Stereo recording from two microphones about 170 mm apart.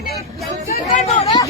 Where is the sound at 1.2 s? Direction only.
25° left (ahead or behind).